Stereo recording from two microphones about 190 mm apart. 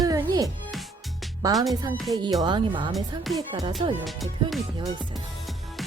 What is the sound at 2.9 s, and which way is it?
Speech, centre (ahead or behind).